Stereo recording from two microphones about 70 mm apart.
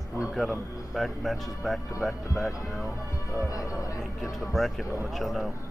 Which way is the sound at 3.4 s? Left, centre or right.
Left.